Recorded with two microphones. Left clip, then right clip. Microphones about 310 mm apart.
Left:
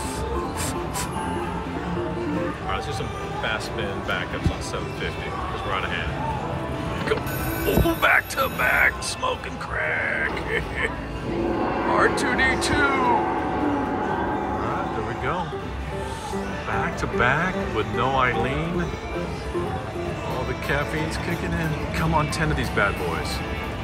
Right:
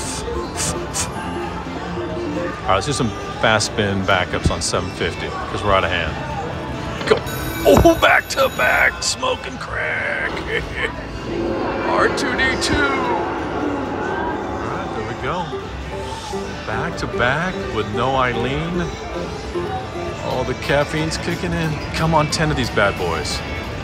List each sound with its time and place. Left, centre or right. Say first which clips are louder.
2.7 s speech: right 9 dB; centre
5.7 s speech: right 12 dB; centre
7.8 s speech: right 7 dB; centre
11.9 s speech: right 3 dB; centre
16.7 s speech: right 2 dB; centre
20.7 s speech: right 7 dB; centre